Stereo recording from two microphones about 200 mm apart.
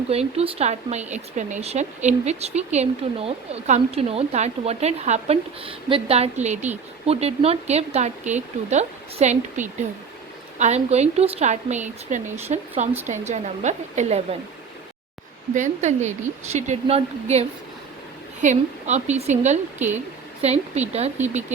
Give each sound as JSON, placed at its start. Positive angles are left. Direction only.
{"t": 0.1, "sound": "speech", "side_deg": -30}
{"t": 15.5, "sound": "speech", "side_deg": -35}